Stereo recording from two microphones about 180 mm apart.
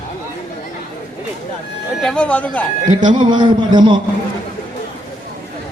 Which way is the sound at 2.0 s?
5° left (ahead or behind).